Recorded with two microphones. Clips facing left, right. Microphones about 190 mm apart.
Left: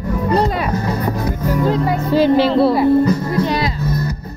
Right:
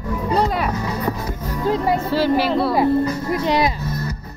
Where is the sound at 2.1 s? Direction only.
20° left (ahead or behind).